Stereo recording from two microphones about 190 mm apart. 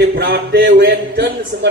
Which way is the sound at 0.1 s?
55° right (ahead or behind).